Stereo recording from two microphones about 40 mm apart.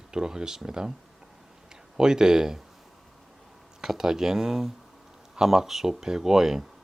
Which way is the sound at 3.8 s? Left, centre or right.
Centre.